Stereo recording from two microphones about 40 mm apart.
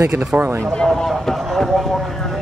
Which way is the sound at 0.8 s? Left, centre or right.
Centre.